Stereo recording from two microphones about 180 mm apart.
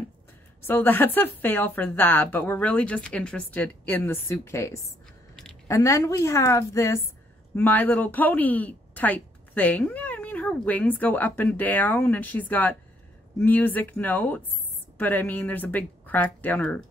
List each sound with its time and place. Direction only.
0.7 s speech: 10° left (ahead or behind)